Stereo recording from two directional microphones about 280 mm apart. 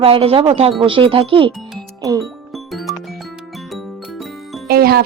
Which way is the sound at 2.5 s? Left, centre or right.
Centre.